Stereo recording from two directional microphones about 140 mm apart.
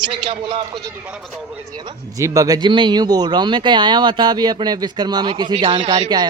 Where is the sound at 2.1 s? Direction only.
25° right (ahead or behind).